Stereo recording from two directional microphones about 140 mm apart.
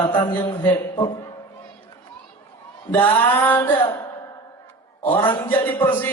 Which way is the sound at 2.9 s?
10° left (ahead or behind).